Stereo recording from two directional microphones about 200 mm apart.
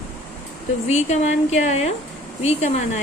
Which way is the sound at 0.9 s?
35° left (ahead or behind).